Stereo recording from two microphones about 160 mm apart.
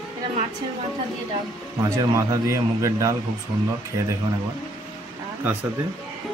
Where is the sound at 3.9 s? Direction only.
30° right (ahead or behind).